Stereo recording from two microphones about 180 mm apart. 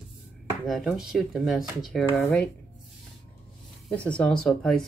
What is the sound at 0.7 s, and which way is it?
Speech, centre (ahead or behind).